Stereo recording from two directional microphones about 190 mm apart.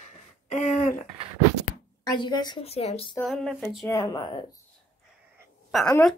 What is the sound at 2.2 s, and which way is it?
Speech, 20° left (ahead or behind).